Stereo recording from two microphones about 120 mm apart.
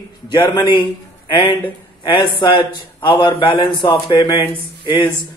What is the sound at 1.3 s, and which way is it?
A man's voice, 50° left (ahead or behind).